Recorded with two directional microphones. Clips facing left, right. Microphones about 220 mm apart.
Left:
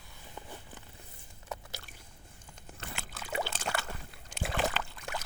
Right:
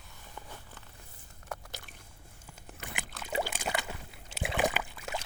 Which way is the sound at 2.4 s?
5° right (ahead or behind).